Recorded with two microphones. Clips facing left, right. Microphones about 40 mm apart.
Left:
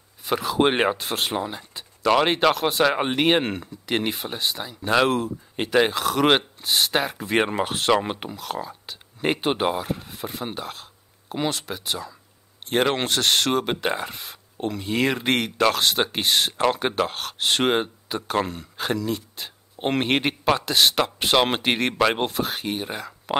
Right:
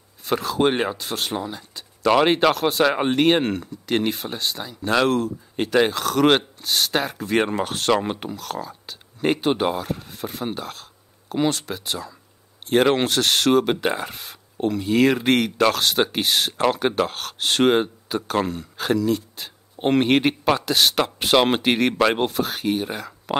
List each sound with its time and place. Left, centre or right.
0.2 s speech: centre
0.7 s speech: left
2.0 s speech: centre